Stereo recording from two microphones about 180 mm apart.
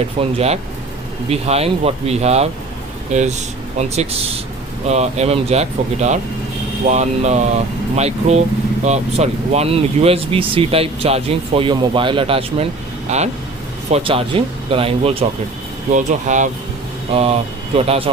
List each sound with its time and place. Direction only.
0.2 s speech: 35° right (ahead or behind)
15.9 s speech: 45° right (ahead or behind)